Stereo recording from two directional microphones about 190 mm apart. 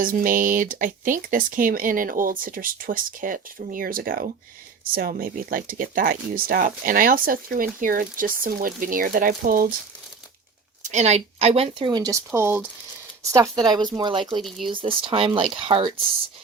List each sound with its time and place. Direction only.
0.0 s speech: 45° right (ahead or behind)
10.8 s speech: 35° right (ahead or behind)